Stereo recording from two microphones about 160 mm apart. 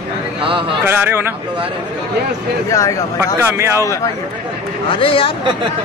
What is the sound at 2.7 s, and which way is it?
Speech, 20° left (ahead or behind).